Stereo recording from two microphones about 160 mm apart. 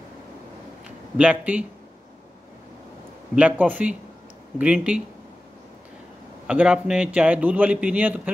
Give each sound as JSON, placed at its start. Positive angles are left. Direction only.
{"t": 0.8, "sound": "speech", "side_deg": -5}
{"t": 3.3, "sound": "a man's voice", "side_deg": -10}
{"t": 6.4, "sound": "a man's voice", "side_deg": -5}